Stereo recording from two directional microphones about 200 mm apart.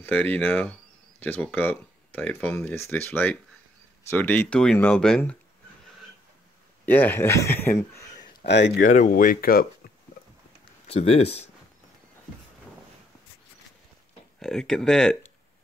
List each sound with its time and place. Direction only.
0.0 s speech: 10° left (ahead or behind)
6.9 s speech: 10° left (ahead or behind)
8.5 s speech: 60° left (ahead or behind)
8.8 s speech: 40° left (ahead or behind)
10.9 s speech: 30° left (ahead or behind)
14.4 s speech: 5° left (ahead or behind)